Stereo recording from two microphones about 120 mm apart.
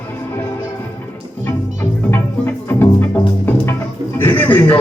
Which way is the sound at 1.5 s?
20° left (ahead or behind).